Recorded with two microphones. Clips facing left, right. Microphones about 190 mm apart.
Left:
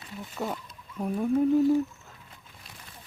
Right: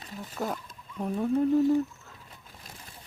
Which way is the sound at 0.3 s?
Centre (ahead or behind).